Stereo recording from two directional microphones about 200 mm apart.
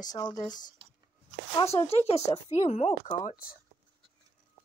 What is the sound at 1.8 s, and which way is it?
A woman's voice, 30° left (ahead or behind).